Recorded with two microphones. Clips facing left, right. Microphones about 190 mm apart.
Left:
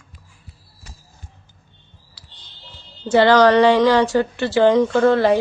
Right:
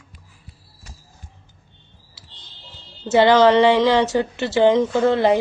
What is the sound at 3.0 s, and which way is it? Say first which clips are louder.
A woman's voice: left 1 dB; 25° right (ahead or behind).